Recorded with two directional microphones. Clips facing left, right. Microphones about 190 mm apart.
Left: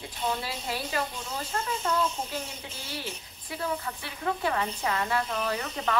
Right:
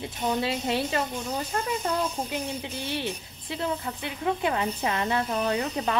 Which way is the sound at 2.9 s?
25° right (ahead or behind).